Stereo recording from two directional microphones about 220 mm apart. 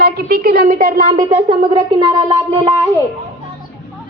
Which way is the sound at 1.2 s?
20° right (ahead or behind).